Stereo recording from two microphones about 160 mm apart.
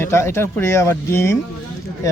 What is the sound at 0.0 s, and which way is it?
A man's voice, 15° left (ahead or behind).